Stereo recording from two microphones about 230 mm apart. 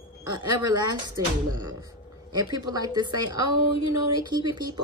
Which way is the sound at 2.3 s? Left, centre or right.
Centre.